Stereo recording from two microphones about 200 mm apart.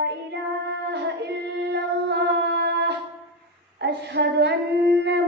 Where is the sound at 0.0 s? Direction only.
60° right (ahead or behind).